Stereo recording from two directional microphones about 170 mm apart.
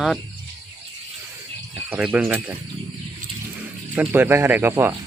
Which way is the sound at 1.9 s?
10° right (ahead or behind).